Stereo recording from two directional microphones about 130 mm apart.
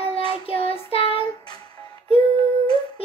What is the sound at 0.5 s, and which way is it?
Child singing, 50° left (ahead or behind).